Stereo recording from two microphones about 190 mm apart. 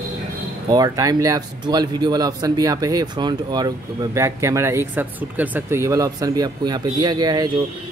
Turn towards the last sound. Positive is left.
turn(degrees=-20)  # may be behind; listen again after turning